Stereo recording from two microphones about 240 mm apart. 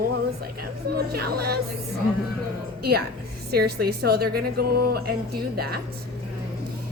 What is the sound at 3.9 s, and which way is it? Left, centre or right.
A woman's voice, right.